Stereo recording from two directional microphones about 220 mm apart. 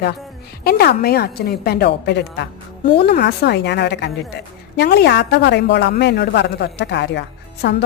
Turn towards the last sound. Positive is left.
turn(degrees=50)  # may be behind; listen again after turning